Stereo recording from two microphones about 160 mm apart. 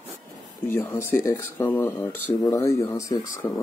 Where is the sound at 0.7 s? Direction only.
15° left (ahead or behind).